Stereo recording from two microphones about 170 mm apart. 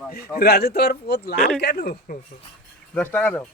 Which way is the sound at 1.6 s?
65° left (ahead or behind).